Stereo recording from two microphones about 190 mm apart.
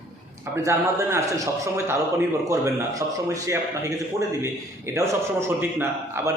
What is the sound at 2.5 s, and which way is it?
A man's voice, 15° right (ahead or behind).